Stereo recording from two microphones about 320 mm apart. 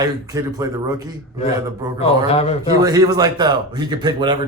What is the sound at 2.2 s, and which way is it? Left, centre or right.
Speech, centre.